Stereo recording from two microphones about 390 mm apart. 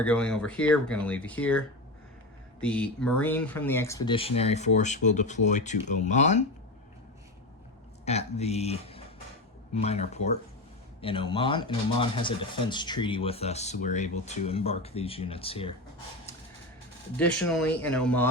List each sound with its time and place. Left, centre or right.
0.0 s speech: centre
8.0 s speech: centre
17.2 s speech: centre